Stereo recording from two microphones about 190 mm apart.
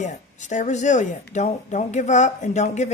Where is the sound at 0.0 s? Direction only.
40° left (ahead or behind).